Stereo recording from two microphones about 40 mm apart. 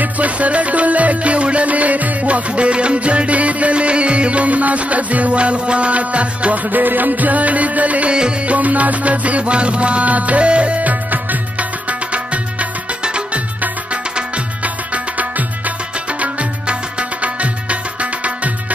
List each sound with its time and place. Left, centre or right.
0.0 s music: right
6.7 s music: right
13.0 s music: right
17.2 s music: right